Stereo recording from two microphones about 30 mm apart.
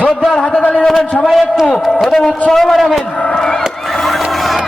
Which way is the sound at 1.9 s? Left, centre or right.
Centre.